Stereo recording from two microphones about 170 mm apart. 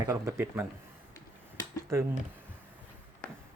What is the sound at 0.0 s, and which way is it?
Speech, 20° right (ahead or behind).